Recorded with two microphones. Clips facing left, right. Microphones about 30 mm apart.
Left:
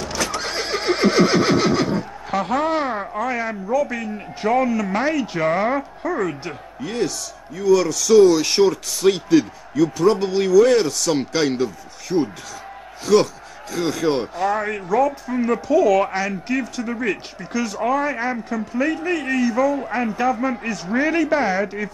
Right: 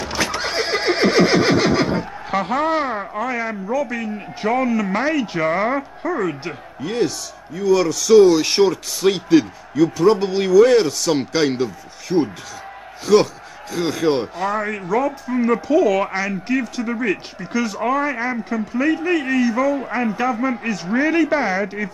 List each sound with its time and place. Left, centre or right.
0.0 s neigh: right
1.5 s neigh: centre
1.8 s neigh: right
2.2 s speech: centre
14.5 s speech: centre
15.0 s speech: centre